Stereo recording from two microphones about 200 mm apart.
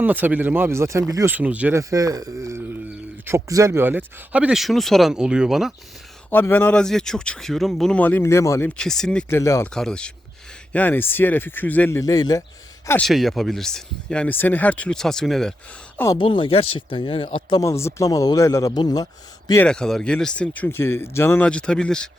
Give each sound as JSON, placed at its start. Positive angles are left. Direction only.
{"t": 0.0, "sound": "speech", "side_deg": -10}
{"t": 6.3, "sound": "speech", "side_deg": 10}
{"t": 9.7, "sound": "speech", "side_deg": 5}
{"t": 13.1, "sound": "speech", "side_deg": 0}
{"t": 16.1, "sound": "speech", "side_deg": 25}
{"t": 19.6, "sound": "speech", "side_deg": 5}